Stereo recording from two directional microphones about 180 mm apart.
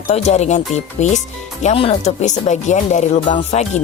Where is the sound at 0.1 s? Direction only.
40° left (ahead or behind).